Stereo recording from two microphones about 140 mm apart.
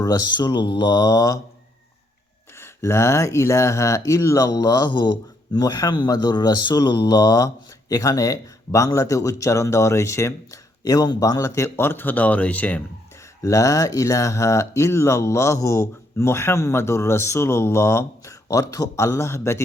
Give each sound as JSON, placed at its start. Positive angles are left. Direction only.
{"t": 0.0, "sound": "speech", "side_deg": 30}
{"t": 2.6, "sound": "speech", "side_deg": 20}
{"t": 13.4, "sound": "speech", "side_deg": 20}